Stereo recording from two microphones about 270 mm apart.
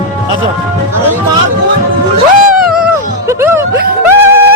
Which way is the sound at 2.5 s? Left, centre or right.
Centre.